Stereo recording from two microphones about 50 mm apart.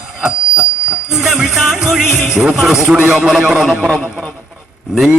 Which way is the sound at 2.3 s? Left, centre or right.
Centre.